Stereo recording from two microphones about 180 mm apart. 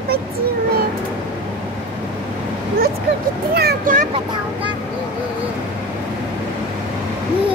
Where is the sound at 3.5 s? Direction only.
55° right (ahead or behind).